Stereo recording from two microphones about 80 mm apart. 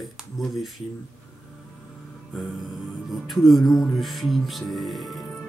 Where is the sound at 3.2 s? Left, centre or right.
Centre.